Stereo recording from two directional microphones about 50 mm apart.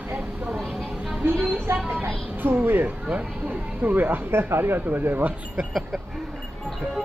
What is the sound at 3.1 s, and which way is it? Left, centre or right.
Speech, right.